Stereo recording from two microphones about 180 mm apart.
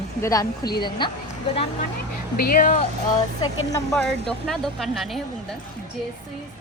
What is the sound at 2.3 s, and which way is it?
Speech, 55° left (ahead or behind).